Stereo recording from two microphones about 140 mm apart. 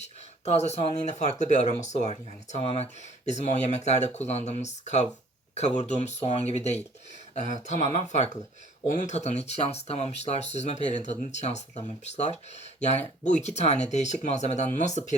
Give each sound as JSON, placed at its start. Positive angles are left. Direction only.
{"t": 0.5, "sound": "speech", "side_deg": 50}